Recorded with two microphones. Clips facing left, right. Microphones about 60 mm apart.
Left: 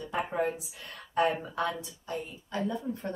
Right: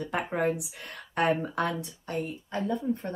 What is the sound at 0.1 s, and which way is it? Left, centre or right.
Speech, right.